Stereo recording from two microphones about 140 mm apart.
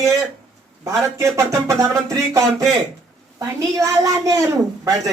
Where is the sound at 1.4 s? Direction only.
25° right (ahead or behind).